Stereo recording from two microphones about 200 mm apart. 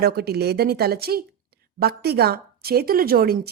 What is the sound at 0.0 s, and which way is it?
Speech, 50° right (ahead or behind).